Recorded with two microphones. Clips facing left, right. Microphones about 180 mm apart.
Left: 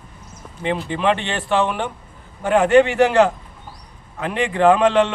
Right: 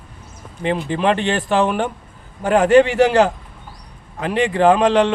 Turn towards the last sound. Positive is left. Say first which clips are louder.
# right 1 dB
turn(degrees=-35)  # may be behind; listen again after turning